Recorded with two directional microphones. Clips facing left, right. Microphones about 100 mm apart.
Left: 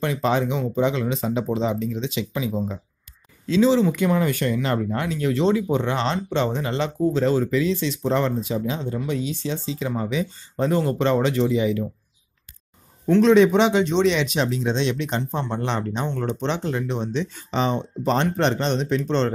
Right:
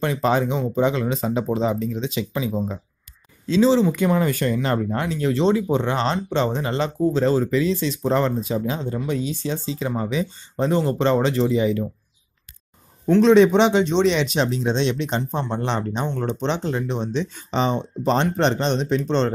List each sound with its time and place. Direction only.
0.0 s speech: 40° right (ahead or behind)
10.6 s speech: 25° right (ahead or behind)
13.1 s speech: 30° right (ahead or behind)